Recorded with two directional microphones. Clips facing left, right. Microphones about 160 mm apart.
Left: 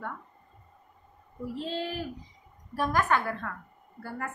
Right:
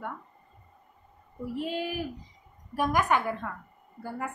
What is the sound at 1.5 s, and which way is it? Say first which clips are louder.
A woman's voice: right 2 dB; 15° right (ahead or behind).